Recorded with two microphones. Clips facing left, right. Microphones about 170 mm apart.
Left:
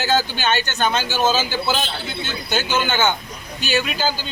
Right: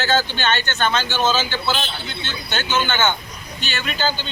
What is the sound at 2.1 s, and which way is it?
Speech, 10° left (ahead or behind).